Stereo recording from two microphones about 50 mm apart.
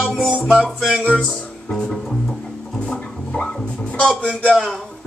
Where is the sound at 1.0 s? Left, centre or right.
Left.